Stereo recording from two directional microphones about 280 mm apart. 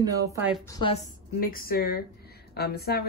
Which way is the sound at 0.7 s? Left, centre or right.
Centre.